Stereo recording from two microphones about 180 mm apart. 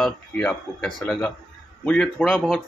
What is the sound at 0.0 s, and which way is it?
Speech, 5° left (ahead or behind).